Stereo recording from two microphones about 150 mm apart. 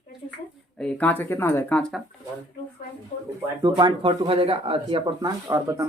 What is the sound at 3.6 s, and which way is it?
Speech, 30° right (ahead or behind).